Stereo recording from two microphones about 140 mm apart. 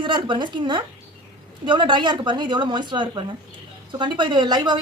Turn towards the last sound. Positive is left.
turn(degrees=-30)  # may be behind; listen again after turning